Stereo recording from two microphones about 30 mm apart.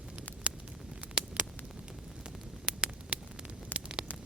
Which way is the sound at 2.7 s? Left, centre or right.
Right.